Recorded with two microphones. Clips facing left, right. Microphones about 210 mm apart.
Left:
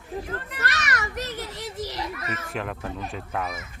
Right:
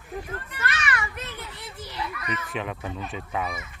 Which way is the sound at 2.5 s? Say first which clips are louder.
Left 2 dB; centre (ahead or behind).